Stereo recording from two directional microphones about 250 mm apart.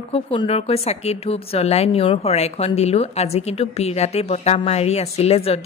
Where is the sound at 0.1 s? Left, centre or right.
Left.